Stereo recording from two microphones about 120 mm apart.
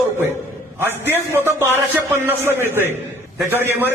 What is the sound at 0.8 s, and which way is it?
A man's voice, 20° right (ahead or behind).